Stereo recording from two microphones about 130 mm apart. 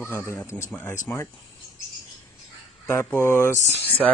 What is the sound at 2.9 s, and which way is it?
Speech, 20° left (ahead or behind).